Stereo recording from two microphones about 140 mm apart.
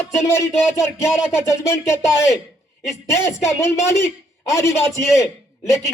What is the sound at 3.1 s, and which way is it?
Speech, 20° left (ahead or behind).